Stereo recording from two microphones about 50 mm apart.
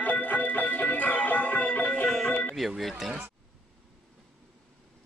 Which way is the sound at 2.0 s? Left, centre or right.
Centre.